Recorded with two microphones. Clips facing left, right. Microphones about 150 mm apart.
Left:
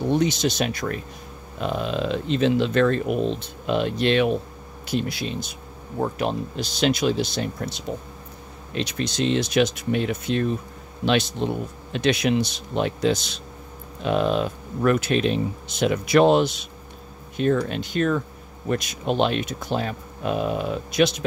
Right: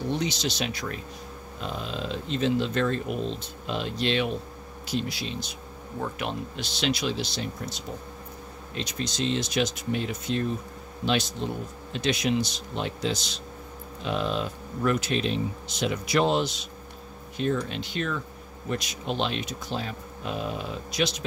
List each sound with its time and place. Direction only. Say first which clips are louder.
0.1 s speech: left 9 dB; 50° left (ahead or behind)
1.6 s speech: left 8 dB; 65° left (ahead or behind)
5.9 s speech: left 7 dB; 40° left (ahead or behind)
8.7 s speech: left 6 dB; 70° left (ahead or behind)